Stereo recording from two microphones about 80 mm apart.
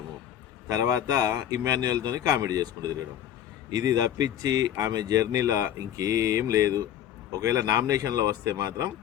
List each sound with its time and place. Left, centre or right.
0.7 s speech: right